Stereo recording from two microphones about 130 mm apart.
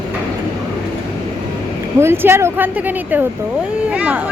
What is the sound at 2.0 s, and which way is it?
Speech, 20° right (ahead or behind).